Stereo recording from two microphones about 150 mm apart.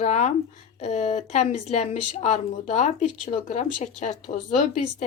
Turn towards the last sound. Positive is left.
turn(degrees=55)  # may be behind; listen again after turning